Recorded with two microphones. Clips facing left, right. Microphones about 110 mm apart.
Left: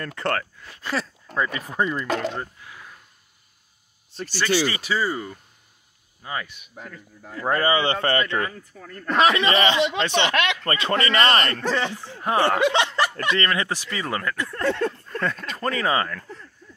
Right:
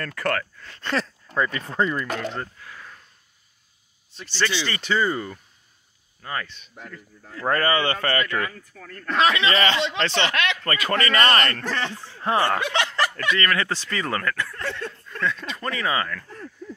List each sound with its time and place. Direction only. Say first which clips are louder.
0.0 s a man's voice: even; 25° left (ahead or behind)
0.6 s speech: right 2 dB; 10° left (ahead or behind)
4.1 s speech: left 9 dB; 35° left (ahead or behind)
4.6 s speech: right 1 dB; 10° left (ahead or behind); by 8.6 s 25° left (ahead or behind)
8.7 s a man's voice: left 2 dB; 15° left (ahead or behind)
11.7 s speech: left 3 dB; 10° left (ahead or behind)
14.9 s speech: left 1 dB; 45° left (ahead or behind)